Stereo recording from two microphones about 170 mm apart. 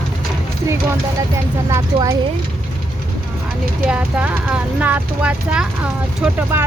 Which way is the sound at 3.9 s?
5° right (ahead or behind).